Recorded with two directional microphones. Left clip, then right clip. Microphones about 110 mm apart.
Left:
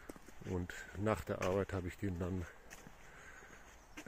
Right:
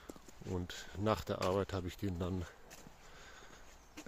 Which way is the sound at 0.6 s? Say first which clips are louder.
Even; centre (ahead or behind).